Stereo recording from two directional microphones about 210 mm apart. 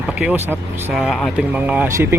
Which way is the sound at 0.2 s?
5° right (ahead or behind).